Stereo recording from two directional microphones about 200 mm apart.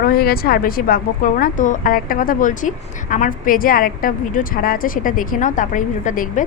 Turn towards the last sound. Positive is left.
turn(degrees=40)  # may be behind; listen again after turning